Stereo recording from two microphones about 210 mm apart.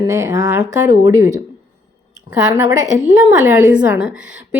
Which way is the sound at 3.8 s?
10° right (ahead or behind).